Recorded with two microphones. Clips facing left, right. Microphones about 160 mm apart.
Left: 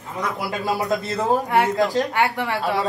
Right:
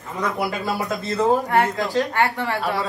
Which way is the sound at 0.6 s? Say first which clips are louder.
Left 2 dB; 20° left (ahead or behind).